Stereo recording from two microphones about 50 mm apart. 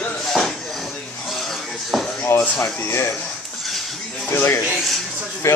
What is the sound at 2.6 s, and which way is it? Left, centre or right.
Speech, left.